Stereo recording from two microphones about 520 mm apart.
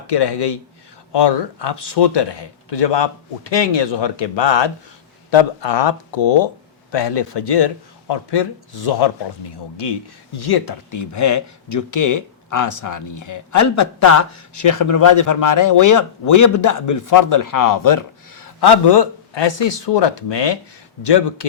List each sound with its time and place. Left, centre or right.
0.1 s speech: left
10.3 s speech: left